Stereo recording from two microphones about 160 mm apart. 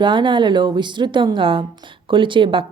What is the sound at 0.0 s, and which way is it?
Speech, 30° right (ahead or behind).